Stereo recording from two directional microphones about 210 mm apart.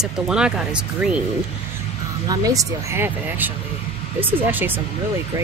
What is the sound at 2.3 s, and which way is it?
Speech, 15° right (ahead or behind).